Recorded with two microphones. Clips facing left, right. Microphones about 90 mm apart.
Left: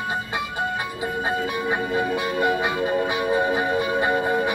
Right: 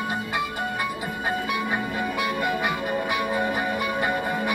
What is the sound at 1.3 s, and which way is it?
Music, 20° left (ahead or behind).